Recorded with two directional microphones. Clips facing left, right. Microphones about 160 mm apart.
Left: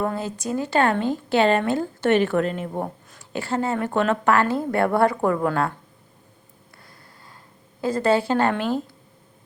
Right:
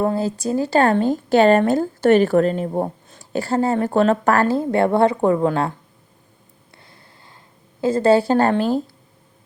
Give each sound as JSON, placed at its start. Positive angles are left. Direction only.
{"t": 0.0, "sound": "speech", "side_deg": -30}
{"t": 6.7, "sound": "snort", "side_deg": -25}
{"t": 7.8, "sound": "speech", "side_deg": -25}